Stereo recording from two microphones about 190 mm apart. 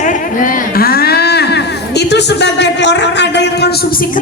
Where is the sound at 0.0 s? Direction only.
45° left (ahead or behind).